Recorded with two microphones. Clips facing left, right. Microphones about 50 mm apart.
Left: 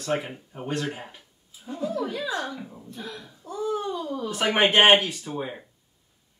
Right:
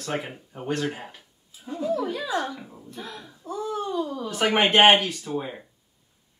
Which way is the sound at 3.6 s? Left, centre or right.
Centre.